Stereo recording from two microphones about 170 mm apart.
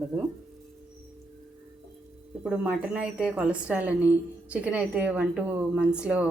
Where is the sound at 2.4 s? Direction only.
5° right (ahead or behind).